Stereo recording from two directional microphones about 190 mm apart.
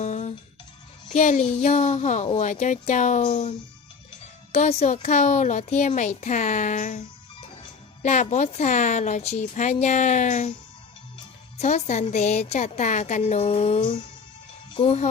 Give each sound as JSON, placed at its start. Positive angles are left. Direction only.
{"t": 0.0, "sound": "music", "side_deg": 35}
{"t": 1.0, "sound": "speech", "side_deg": 40}
{"t": 4.5, "sound": "speech", "side_deg": 35}
{"t": 8.0, "sound": "speech", "side_deg": 40}
{"t": 11.5, "sound": "speech", "side_deg": 35}